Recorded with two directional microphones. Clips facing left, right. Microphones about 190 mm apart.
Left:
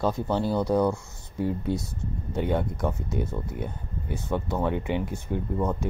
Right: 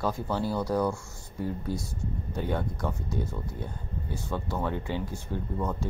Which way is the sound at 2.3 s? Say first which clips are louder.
Left 5 dB; 20° left (ahead or behind).